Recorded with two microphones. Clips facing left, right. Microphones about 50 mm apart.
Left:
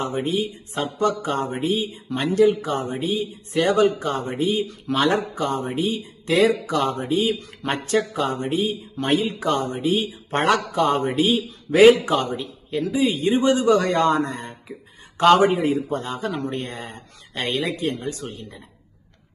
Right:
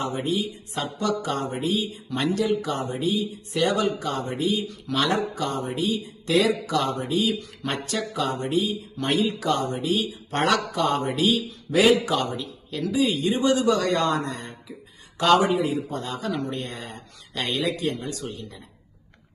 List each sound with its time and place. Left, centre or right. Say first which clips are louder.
0.0 s speech: left 2 dB; left